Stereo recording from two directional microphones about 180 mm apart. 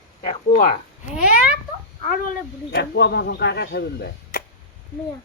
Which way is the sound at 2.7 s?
65° left (ahead or behind).